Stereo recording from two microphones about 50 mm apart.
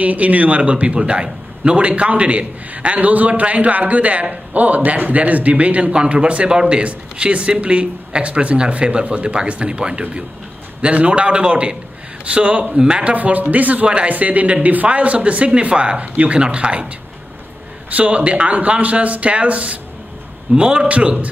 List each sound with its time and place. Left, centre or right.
0.0 s a man's voice: right
17.8 s a man's voice: right